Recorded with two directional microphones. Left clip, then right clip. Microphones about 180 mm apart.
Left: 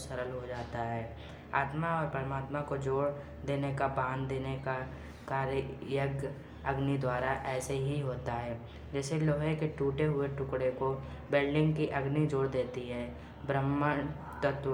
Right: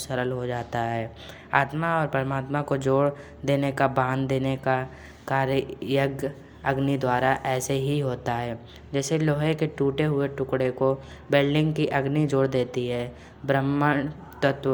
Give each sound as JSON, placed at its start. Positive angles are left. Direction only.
{"t": 0.0, "sound": "a woman's voice", "side_deg": -40}